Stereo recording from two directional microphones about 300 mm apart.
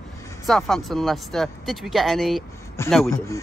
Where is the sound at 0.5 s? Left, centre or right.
Centre.